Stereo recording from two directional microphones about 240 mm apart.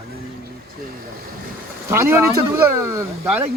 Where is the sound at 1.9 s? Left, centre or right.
Centre.